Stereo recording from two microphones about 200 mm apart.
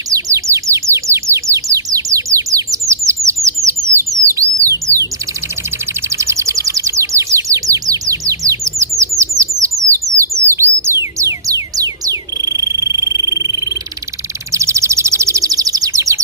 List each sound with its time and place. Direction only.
0.1 s bird: 15° right (ahead or behind)
6.1 s bird: 15° right (ahead or behind)